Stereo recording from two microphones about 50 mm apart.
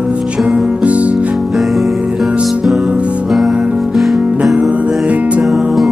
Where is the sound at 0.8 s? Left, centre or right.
Right.